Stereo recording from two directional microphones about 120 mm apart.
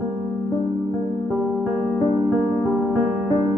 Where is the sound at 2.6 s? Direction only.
15° right (ahead or behind).